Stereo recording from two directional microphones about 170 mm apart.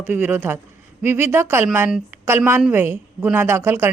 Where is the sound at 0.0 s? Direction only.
10° right (ahead or behind).